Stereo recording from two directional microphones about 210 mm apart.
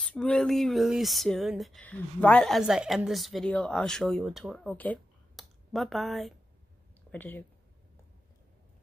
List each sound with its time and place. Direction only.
0.0 s speech: 5° left (ahead or behind)